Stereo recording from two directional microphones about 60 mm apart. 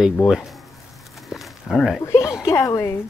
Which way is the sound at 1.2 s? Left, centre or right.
Centre.